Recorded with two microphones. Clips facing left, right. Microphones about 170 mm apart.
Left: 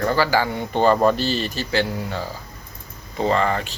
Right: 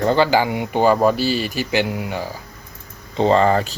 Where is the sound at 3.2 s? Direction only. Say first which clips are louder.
Right 5 dB; 30° right (ahead or behind).